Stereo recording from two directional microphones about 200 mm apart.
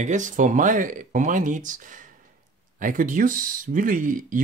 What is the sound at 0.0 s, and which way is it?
Speech, 40° right (ahead or behind).